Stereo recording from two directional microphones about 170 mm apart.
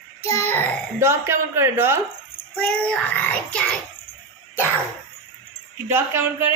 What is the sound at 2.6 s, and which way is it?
Child singing, 5° left (ahead or behind).